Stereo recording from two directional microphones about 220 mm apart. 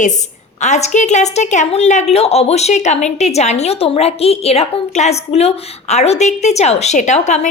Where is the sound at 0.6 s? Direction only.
30° left (ahead or behind).